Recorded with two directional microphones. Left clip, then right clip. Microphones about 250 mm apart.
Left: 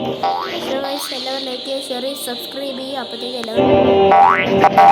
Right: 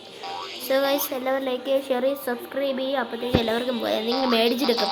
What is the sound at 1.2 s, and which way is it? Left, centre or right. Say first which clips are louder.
Speech: left 1 dB; centre.